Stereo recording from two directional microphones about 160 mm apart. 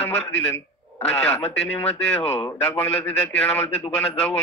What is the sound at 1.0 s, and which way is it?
A man's voice, 5° left (ahead or behind).